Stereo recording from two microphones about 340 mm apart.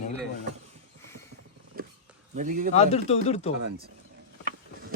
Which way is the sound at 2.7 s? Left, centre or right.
Centre.